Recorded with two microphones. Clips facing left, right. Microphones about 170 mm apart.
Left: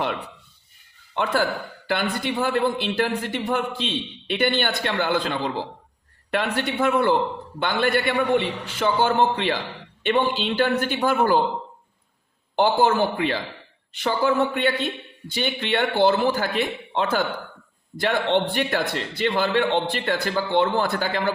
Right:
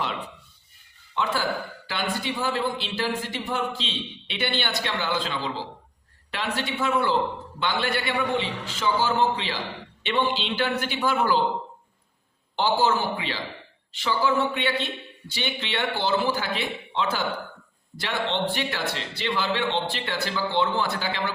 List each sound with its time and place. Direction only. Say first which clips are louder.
1.1 s a man's voice: left 3 dB; 55° left (ahead or behind)
12.5 s a man's voice: left 4 dB; 55° left (ahead or behind)